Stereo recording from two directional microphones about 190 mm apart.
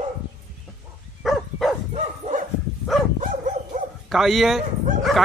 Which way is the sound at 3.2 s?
45° right (ahead or behind).